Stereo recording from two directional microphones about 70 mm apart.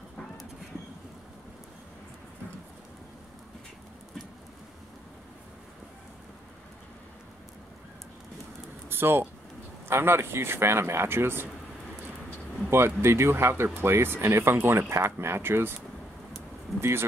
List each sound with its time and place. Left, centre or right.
8.8 s speech: right
12.6 s speech: right